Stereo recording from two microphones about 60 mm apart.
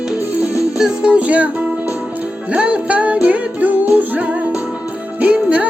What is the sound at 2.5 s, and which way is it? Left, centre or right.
Music, right.